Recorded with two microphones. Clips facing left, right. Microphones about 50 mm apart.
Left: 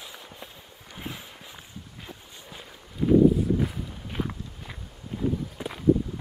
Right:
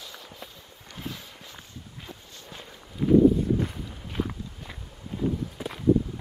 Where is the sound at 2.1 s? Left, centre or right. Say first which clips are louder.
Even; centre.